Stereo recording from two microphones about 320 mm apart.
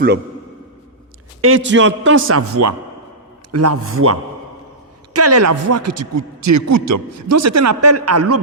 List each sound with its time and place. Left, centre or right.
1.4 s a man's voice: right